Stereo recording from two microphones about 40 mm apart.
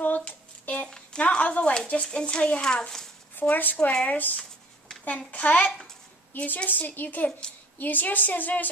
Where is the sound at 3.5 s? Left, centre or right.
Left.